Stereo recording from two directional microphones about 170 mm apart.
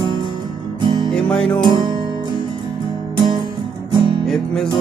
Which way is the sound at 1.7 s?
25° right (ahead or behind).